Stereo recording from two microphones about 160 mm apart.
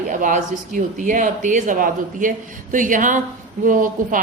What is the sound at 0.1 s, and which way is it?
Speech, 55° right (ahead or behind).